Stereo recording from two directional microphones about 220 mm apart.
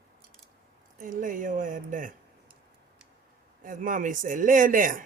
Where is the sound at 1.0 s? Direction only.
35° right (ahead or behind).